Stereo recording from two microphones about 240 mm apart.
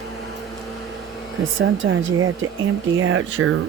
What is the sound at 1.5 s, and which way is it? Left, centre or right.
Speech, right.